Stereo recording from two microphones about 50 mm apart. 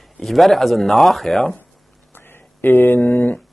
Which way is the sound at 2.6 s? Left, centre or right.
Left.